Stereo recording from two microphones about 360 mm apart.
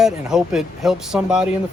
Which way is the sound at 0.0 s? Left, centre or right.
Centre.